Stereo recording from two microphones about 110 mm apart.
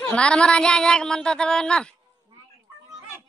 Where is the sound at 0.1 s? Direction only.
10° left (ahead or behind).